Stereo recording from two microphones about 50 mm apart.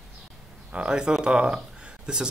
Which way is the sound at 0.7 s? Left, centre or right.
Centre.